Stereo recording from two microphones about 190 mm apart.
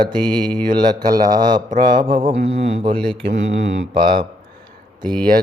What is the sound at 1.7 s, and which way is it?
Mantra, 45° right (ahead or behind).